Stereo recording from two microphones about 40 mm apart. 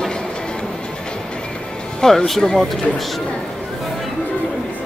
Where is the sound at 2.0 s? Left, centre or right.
Centre.